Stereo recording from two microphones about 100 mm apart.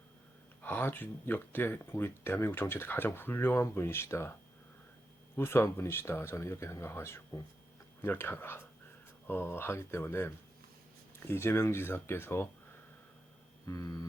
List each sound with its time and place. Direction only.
0.6 s speech: 20° left (ahead or behind)
5.4 s speech: 25° left (ahead or behind)
13.7 s a sound: 35° left (ahead or behind)